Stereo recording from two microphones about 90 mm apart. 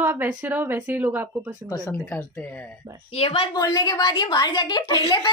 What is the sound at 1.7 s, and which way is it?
Speech, 35° left (ahead or behind).